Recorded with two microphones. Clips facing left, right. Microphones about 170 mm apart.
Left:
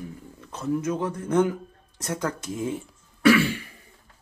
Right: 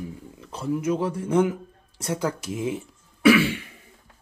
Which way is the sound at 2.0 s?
30° right (ahead or behind).